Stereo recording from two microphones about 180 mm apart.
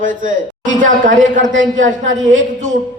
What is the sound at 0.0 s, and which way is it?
A man's voice, 45° right (ahead or behind).